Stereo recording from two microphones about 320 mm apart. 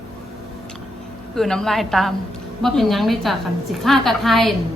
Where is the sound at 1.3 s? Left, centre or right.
Centre.